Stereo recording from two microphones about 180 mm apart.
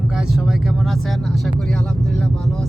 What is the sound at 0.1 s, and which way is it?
Speech, 5° right (ahead or behind).